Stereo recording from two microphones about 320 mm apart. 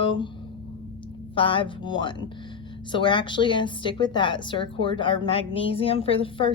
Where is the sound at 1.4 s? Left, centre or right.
Centre.